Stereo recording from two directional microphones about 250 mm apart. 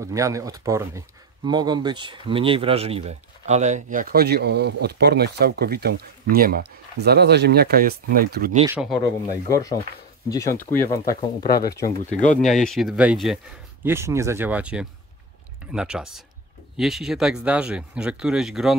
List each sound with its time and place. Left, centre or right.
0.0 s speech: centre; by 8.5 s right
8.6 s speech: centre
9.5 s speech: centre
11.8 s speech: left
12.4 s speech: centre